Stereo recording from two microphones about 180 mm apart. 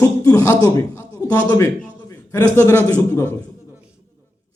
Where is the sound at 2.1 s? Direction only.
15° left (ahead or behind).